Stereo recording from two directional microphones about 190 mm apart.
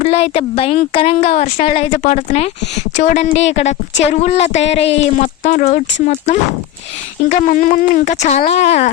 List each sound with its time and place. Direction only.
0.0 s speech: 35° left (ahead or behind)
7.3 s speech: 40° left (ahead or behind)